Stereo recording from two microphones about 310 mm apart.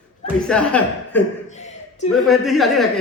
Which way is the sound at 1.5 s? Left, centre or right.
Left.